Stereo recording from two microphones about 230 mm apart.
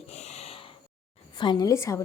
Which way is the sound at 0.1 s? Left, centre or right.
Left.